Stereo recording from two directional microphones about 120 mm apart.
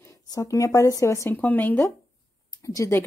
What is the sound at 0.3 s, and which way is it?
Speech, 25° left (ahead or behind).